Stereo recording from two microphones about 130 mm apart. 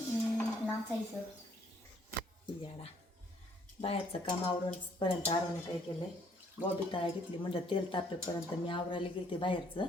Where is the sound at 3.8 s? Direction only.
45° left (ahead or behind).